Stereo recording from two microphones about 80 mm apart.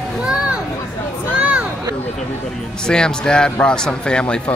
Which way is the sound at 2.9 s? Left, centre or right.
Centre.